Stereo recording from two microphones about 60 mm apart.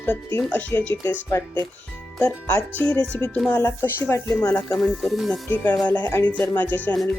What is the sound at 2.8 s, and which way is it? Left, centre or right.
Speech, centre.